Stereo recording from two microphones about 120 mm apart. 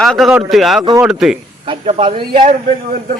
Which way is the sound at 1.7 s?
50° right (ahead or behind).